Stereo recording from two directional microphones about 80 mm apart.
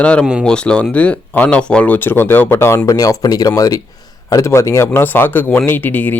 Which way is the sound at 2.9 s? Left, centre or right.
Left.